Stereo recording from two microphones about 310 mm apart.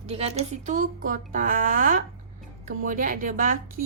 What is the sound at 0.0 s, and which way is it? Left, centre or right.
Speech, centre.